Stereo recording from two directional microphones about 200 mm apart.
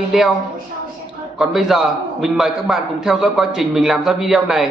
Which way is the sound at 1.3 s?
Centre (ahead or behind).